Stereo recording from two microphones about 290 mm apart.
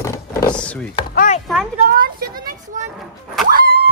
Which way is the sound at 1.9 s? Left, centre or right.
Right.